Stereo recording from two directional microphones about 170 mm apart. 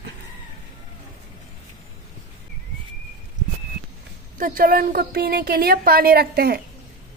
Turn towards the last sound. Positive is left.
turn(degrees=-65)  # may be behind; listen again after turning